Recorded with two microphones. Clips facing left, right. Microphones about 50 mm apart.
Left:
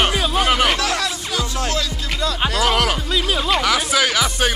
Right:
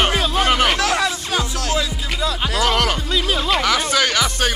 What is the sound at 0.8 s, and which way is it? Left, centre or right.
Speech, centre.